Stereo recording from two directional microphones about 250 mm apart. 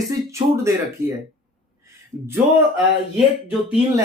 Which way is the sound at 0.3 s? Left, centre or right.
Centre.